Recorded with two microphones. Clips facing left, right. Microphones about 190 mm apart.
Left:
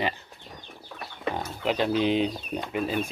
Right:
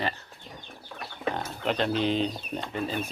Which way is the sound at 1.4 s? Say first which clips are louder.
Left 3 dB; 10° left (ahead or behind).